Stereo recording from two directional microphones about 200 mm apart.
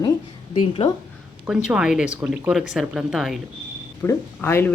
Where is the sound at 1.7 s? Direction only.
5° right (ahead or behind).